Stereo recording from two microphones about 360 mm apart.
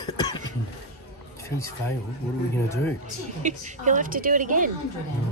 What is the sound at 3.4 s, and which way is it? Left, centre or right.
Speech, right.